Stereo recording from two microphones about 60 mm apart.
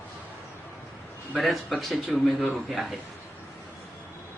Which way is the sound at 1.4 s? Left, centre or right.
Centre.